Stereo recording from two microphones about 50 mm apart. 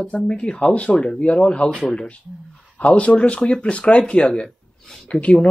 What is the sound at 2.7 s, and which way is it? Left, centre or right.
Speech, left.